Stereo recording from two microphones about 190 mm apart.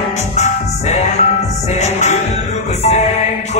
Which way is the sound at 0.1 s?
35° left (ahead or behind).